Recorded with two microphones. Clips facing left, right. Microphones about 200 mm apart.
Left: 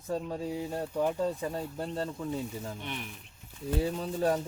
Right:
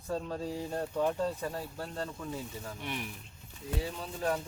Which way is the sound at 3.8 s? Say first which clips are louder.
Left 6 dB; 40° left (ahead or behind).